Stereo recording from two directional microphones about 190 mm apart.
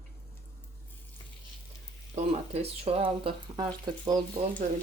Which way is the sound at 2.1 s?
35° right (ahead or behind).